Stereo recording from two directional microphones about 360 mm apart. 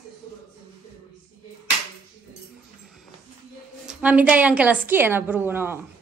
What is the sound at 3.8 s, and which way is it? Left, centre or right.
A woman's voice, centre.